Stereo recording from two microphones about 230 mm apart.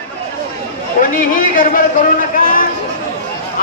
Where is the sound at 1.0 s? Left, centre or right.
Left.